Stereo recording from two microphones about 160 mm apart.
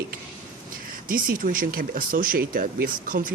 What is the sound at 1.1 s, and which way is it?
Speech, 60° right (ahead or behind).